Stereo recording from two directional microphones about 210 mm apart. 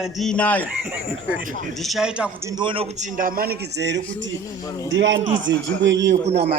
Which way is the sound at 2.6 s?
25° right (ahead or behind).